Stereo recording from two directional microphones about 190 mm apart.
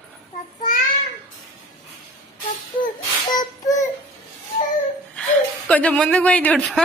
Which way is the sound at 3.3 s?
20° left (ahead or behind).